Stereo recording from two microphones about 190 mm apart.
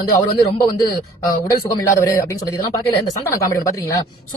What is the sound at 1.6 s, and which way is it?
Speech, 15° left (ahead or behind).